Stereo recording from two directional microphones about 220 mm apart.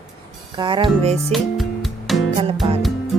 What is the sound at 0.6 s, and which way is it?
Speech, 20° right (ahead or behind).